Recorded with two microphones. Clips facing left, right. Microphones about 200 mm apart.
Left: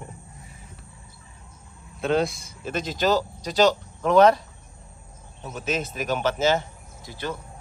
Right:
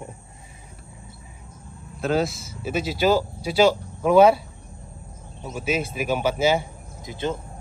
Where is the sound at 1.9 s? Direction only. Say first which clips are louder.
Even; centre (ahead or behind).